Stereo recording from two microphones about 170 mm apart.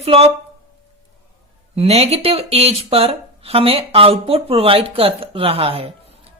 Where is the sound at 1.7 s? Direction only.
35° right (ahead or behind).